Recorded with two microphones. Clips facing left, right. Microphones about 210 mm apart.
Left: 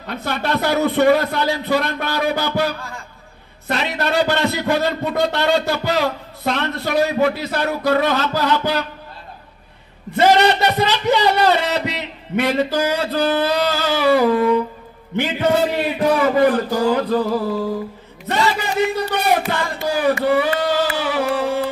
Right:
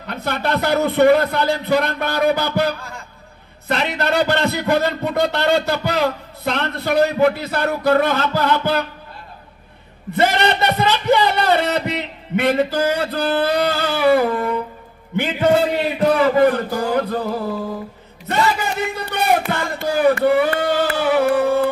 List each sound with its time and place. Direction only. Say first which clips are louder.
0.0 s a man's voice: right 1 dB; 55° right (ahead or behind)
10.1 s a man's voice: left 3 dB; 55° right (ahead or behind)
16.3 s a man's voice: even; 55° right (ahead or behind)
18.3 s a sound: even; 55° right (ahead or behind)